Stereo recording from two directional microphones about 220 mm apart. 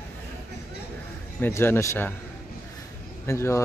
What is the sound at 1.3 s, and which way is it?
Speech, 10° left (ahead or behind).